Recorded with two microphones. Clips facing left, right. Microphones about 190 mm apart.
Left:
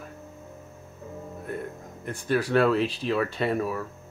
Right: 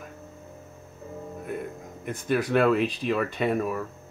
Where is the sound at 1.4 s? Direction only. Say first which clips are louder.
Even; 5° right (ahead or behind).